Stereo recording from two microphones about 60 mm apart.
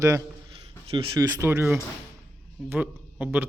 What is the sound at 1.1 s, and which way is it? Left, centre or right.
Speech, right.